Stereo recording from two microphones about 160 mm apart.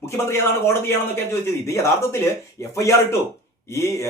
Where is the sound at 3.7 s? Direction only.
20° left (ahead or behind).